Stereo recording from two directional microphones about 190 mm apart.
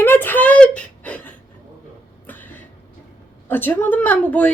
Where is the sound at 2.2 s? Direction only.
10° left (ahead or behind).